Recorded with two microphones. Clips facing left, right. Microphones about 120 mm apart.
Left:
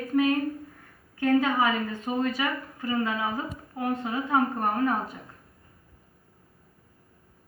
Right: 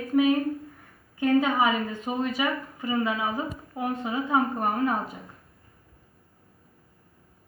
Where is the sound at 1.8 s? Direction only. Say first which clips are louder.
Left 1 dB; 25° right (ahead or behind).